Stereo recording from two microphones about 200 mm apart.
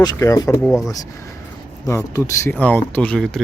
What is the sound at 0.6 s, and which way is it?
Speech, centre (ahead or behind).